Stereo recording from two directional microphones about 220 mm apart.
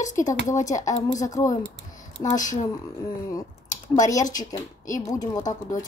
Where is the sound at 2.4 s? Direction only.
35° left (ahead or behind).